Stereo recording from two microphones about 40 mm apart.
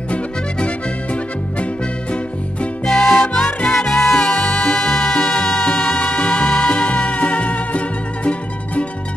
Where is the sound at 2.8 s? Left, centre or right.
Centre; by 8.3 s left.